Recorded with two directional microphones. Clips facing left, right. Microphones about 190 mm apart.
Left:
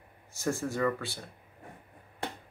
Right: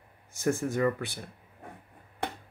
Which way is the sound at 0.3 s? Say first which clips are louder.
Right 3 dB; 15° right (ahead or behind).